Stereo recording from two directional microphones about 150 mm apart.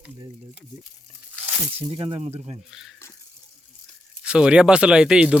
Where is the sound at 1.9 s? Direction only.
35° right (ahead or behind).